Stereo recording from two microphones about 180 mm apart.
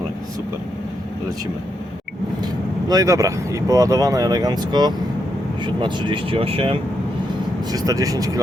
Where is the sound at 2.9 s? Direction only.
20° right (ahead or behind).